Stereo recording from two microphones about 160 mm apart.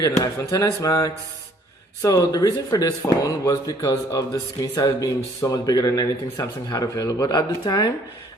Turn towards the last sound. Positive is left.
turn(degrees=25)  # may be behind; listen again after turning